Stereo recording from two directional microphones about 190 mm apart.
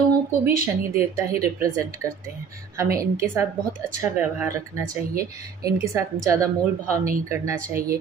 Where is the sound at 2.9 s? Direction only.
15° right (ahead or behind).